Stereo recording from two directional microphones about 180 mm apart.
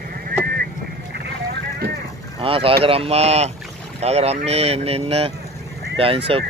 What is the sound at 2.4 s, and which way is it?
Speech, 30° right (ahead or behind).